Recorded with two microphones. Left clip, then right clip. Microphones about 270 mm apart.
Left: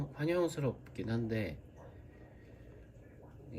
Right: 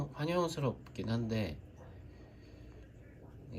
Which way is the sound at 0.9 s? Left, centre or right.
Centre.